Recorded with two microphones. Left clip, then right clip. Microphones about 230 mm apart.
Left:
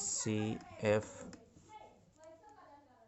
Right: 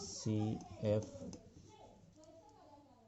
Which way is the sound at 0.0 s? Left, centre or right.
Left.